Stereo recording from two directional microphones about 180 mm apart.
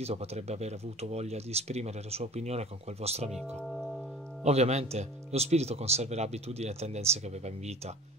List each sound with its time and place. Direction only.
0.0 s speech: 35° right (ahead or behind)
3.3 s speech: 5° left (ahead or behind)
4.4 s speech: 40° right (ahead or behind)